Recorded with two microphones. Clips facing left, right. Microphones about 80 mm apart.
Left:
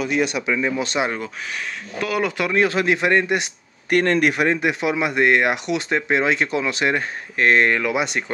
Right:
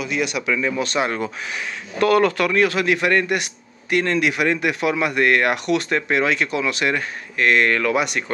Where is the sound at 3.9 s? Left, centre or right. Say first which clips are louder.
Left 2 dB; left.